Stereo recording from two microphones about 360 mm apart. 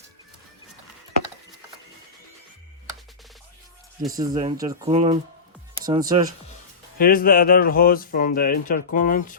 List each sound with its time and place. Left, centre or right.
4.1 s speech: centre
7.0 s speech: left